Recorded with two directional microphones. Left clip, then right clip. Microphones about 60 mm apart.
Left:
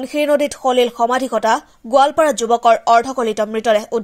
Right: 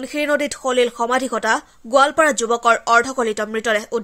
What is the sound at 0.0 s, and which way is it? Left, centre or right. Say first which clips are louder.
Speech: left 4 dB; left.